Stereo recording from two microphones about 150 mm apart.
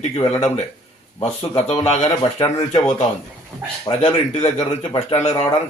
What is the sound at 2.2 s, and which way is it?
Speech, 25° left (ahead or behind).